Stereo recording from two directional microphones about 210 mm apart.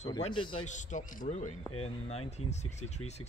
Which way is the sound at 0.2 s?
25° left (ahead or behind).